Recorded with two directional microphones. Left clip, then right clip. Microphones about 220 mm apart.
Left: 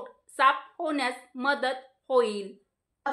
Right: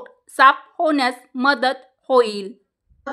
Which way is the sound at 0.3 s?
50° right (ahead or behind).